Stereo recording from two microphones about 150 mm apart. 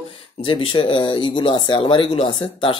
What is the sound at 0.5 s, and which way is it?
Speech, 35° left (ahead or behind).